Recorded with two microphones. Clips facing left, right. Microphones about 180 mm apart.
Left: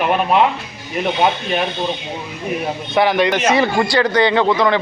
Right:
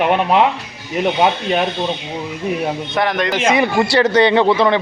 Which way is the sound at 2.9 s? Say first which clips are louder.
Left 4 dB; 5° left (ahead or behind).